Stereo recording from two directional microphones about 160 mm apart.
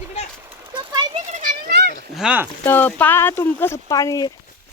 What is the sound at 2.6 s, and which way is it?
Speech, 10° left (ahead or behind).